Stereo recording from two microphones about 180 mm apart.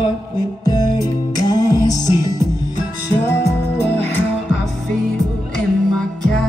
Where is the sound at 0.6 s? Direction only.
20° left (ahead or behind).